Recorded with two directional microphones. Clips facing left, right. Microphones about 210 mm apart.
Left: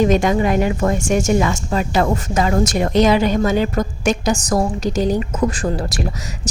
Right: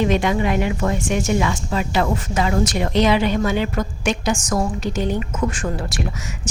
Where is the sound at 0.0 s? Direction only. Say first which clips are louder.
Left 4 dB; 40° left (ahead or behind).